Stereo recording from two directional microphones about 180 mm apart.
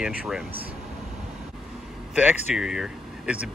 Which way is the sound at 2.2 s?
5° right (ahead or behind).